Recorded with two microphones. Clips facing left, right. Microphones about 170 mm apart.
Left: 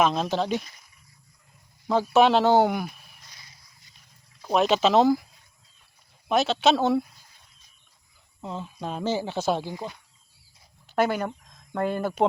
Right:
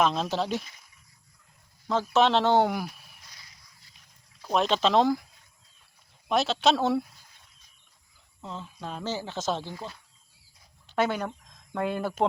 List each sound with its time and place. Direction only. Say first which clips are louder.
0.0 s speech: left 2 dB; centre (ahead or behind)
1.9 s speech: left 4 dB; 10° left (ahead or behind)
4.4 s speech: left 3 dB; 10° left (ahead or behind)
6.2 s speech: left 2 dB; centre (ahead or behind)
8.4 s speech: left 5 dB; 15° left (ahead or behind)
10.8 s speech: left 3 dB; 5° left (ahead or behind)